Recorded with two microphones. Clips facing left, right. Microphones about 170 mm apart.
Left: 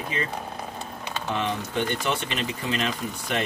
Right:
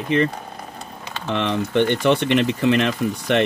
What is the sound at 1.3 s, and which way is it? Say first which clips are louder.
Speech: right 8 dB; 70° right (ahead or behind).